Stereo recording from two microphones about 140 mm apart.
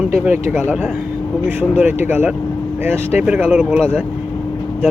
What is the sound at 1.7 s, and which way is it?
Speech, 15° right (ahead or behind).